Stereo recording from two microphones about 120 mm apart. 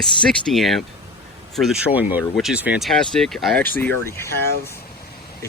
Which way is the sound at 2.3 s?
5° right (ahead or behind).